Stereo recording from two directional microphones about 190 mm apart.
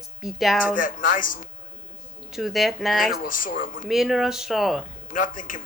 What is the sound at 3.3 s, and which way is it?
Speech, 45° left (ahead or behind).